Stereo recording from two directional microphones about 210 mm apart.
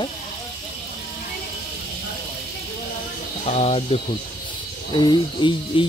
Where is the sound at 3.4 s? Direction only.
30° left (ahead or behind).